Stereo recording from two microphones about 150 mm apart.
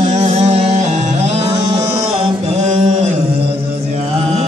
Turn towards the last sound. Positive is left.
turn(degrees=-50)  # may be behind; listen again after turning